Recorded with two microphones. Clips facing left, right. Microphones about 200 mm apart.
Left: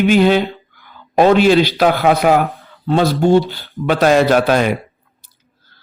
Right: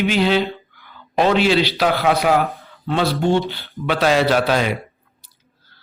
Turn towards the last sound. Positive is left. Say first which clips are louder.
# left 4 dB
turn(degrees=50)  # may be behind; listen again after turning